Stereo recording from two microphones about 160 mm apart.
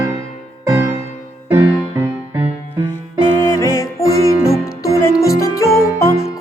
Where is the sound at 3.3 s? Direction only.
15° left (ahead or behind).